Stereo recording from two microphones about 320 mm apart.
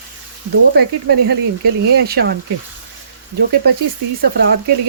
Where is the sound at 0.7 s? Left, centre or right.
Right.